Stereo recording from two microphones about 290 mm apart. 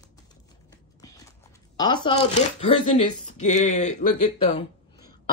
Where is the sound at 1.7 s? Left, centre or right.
Centre.